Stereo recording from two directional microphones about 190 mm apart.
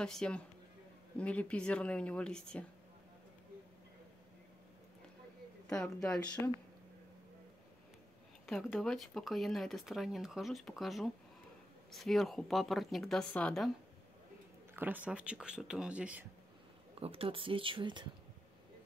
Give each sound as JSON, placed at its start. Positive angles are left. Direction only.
{"t": 0.0, "sound": "speech", "side_deg": 5}
{"t": 5.7, "sound": "speech", "side_deg": 5}
{"t": 8.5, "sound": "speech", "side_deg": 0}
{"t": 14.7, "sound": "speech", "side_deg": -10}
{"t": 17.0, "sound": "speech", "side_deg": -30}